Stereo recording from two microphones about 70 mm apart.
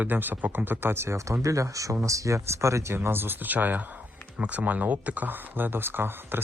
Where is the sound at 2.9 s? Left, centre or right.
Right.